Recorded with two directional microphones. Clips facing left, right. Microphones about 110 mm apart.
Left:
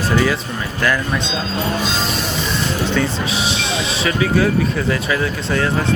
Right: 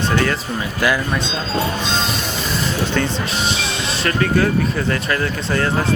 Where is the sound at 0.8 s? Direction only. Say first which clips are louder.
Even; 10° right (ahead or behind).